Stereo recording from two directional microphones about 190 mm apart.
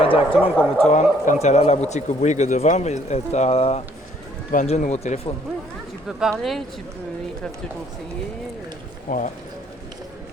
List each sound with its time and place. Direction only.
0.0 s a man's voice: 30° left (ahead or behind)
0.9 s a man's voice: 40° left (ahead or behind)
6.1 s speech: 5° right (ahead or behind)
9.0 s speech: 45° left (ahead or behind)